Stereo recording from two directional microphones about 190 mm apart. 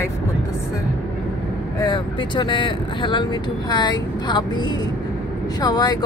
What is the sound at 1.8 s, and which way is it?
Speech, 25° left (ahead or behind).